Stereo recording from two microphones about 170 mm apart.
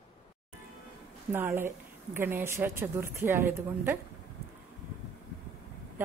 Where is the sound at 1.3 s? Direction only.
15° right (ahead or behind).